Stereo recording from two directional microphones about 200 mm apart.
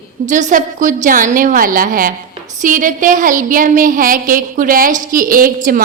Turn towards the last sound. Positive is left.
turn(degrees=-45)  # may be behind; listen again after turning